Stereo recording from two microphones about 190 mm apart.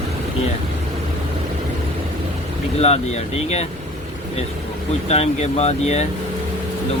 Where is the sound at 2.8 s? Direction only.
35° left (ahead or behind).